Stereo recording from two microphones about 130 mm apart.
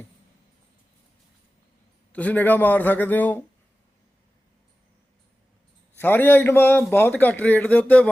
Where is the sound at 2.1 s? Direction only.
10° left (ahead or behind).